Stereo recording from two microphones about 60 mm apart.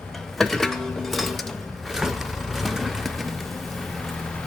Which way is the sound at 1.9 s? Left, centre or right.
Centre.